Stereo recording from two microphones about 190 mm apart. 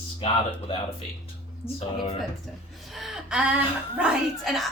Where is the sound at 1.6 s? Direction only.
10° left (ahead or behind).